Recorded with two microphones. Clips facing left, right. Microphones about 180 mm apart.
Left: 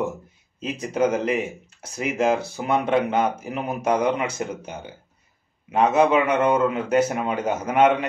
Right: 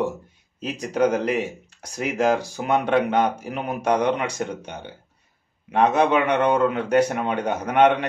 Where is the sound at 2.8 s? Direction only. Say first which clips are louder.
Right 1 dB; 5° left (ahead or behind).